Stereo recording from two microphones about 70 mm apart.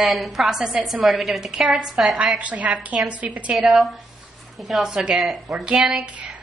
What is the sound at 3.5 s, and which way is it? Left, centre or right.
A woman's voice, centre.